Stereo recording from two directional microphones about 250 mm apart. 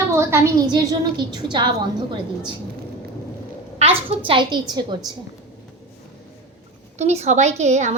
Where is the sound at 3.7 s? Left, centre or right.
Right.